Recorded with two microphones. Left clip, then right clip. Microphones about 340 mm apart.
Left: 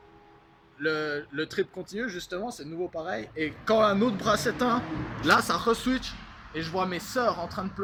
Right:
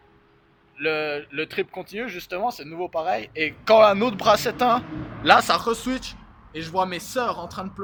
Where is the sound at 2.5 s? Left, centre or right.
Right.